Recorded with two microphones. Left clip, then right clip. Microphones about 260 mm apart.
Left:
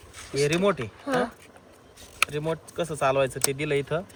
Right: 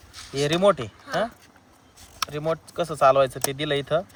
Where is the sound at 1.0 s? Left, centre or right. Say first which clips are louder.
Left 2 dB; centre.